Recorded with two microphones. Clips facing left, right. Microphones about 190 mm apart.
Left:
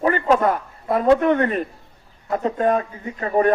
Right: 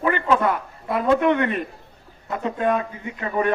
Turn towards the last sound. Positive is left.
turn(degrees=40)  # may be behind; listen again after turning